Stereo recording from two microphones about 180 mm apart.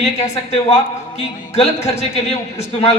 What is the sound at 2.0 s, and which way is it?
Speech, 35° left (ahead or behind).